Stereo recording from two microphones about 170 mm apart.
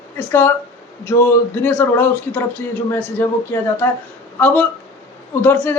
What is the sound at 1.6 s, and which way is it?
Speech, 10° left (ahead or behind).